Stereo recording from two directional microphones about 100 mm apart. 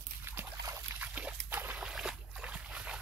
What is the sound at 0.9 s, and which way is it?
Dog, 15° right (ahead or behind).